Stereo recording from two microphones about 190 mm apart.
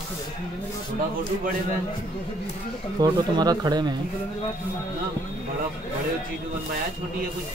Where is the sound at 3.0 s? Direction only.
20° right (ahead or behind).